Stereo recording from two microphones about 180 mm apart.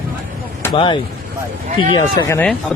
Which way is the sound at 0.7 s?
30° left (ahead or behind).